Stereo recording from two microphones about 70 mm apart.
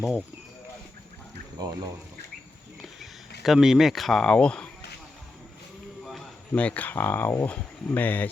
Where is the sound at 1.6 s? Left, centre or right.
Right.